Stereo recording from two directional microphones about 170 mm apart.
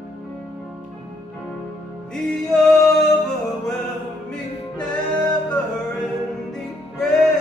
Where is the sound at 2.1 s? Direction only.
Centre (ahead or behind).